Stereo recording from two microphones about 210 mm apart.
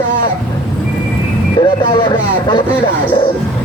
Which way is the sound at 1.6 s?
25° left (ahead or behind).